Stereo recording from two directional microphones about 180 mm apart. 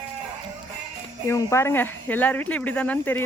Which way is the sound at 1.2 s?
15° left (ahead or behind).